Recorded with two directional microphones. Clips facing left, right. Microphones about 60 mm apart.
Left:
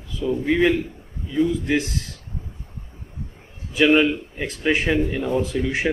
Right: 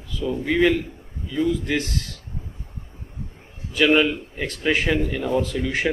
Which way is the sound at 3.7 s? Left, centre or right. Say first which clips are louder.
Left 1 dB; centre.